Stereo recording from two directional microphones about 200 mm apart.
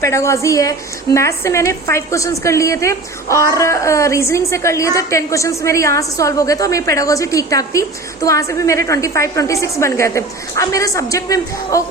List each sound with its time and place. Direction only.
0.0 s a woman's voice: 15° left (ahead or behind)